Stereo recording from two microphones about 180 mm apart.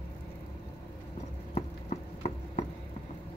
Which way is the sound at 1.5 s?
40° left (ahead or behind).